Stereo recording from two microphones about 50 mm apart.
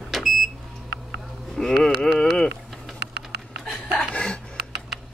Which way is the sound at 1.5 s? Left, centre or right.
Centre.